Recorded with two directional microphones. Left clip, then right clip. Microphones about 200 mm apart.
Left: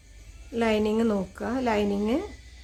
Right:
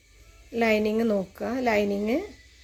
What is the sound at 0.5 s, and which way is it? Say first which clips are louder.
A woman's voice: right 1 dB; 10° right (ahead or behind).